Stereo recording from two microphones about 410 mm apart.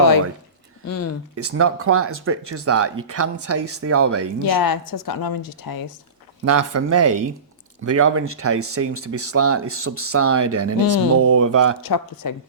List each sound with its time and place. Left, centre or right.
0.9 s speech: left
1.4 s speech: right
4.4 s a woman's voice: left
6.4 s speech: right
11.8 s a woman's voice: left